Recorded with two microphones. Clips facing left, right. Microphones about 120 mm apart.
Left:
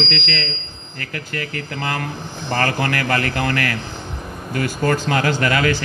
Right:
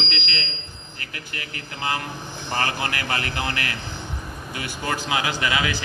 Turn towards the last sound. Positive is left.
turn(degrees=45)  # may be behind; listen again after turning